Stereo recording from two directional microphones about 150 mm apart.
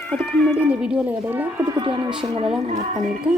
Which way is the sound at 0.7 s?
5° right (ahead or behind).